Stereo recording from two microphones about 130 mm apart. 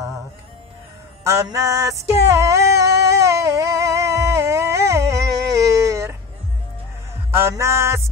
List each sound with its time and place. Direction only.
1.2 s music: 25° right (ahead or behind)
7.3 s music: 20° right (ahead or behind)